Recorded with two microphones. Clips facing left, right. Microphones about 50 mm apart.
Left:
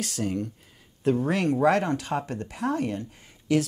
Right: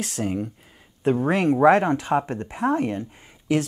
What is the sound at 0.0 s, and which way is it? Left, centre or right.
Speech, centre.